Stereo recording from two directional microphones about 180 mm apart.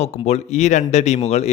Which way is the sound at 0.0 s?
35° left (ahead or behind).